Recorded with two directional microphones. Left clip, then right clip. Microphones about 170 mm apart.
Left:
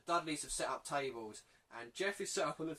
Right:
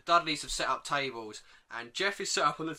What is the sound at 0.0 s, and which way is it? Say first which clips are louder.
Speech: right 10 dB; 20° right (ahead or behind).